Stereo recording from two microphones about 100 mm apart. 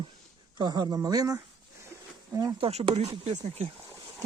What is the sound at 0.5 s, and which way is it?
Speech, 45° right (ahead or behind).